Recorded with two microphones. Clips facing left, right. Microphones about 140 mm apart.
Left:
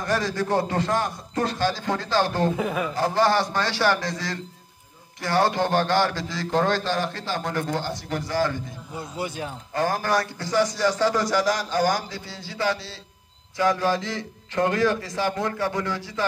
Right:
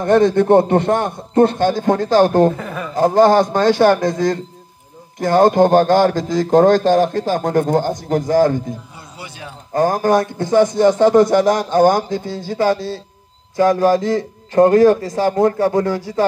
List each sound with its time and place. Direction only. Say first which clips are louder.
0.1 s a man's voice: right 13 dB; 55° right (ahead or behind)
2.5 s a man's voice: left 1 dB; 10° left (ahead or behind)
2.9 s a man's voice: right 12 dB; 50° right (ahead or behind)
9.2 s a man's voice: left 4 dB; 45° left (ahead or behind)
9.8 s a man's voice: right 9 dB; 45° right (ahead or behind)